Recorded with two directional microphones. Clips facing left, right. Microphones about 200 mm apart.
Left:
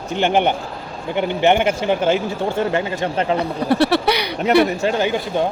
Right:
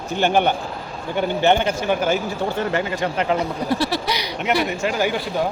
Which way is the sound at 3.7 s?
65° left (ahead or behind).